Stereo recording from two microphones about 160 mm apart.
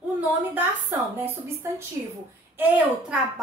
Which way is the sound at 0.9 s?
15° right (ahead or behind).